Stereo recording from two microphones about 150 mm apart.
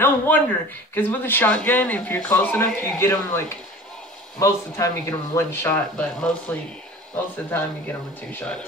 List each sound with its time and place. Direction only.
0.0 s speech: 10° left (ahead or behind)